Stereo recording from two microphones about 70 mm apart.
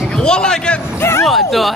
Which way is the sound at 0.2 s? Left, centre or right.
Centre.